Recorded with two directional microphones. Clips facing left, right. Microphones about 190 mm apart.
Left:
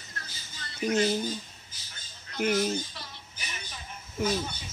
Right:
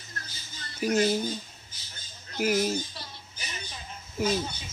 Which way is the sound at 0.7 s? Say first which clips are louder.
Right 1 dB; 5° right (ahead or behind).